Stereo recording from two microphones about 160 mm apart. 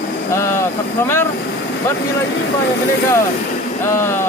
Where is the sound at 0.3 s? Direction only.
15° left (ahead or behind).